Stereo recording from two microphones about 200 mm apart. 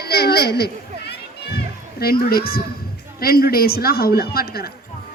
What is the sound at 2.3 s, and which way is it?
A woman's voice, 50° left (ahead or behind).